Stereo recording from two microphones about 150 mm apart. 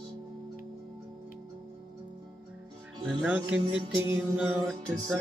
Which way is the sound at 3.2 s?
10° right (ahead or behind).